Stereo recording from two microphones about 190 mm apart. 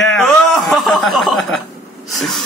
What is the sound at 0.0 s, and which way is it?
Chuckle, centre (ahead or behind).